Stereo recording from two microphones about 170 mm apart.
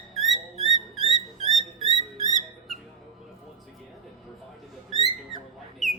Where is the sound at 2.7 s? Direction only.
Centre (ahead or behind).